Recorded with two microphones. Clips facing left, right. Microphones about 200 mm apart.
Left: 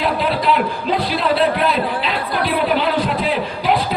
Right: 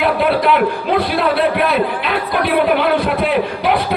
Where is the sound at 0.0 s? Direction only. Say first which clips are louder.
Right 4 dB; 60° right (ahead or behind).